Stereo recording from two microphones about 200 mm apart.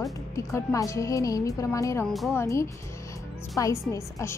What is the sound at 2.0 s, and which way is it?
Speech, centre (ahead or behind).